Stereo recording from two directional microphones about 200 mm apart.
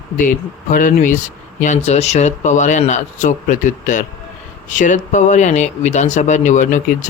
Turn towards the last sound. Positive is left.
turn(degrees=40)  # may be behind; listen again after turning